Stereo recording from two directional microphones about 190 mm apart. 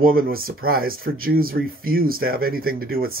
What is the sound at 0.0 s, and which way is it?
Speech, 50° right (ahead or behind).